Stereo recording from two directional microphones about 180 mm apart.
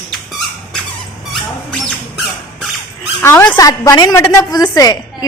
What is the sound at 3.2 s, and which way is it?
A woman's voice, 10° left (ahead or behind).